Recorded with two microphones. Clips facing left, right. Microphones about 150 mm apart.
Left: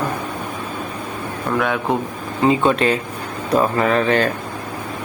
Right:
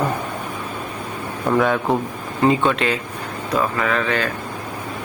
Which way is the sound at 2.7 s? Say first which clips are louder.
Left 4 dB; 40° left (ahead or behind).